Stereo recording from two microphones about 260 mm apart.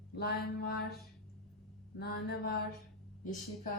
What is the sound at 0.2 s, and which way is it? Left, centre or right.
Speech, left.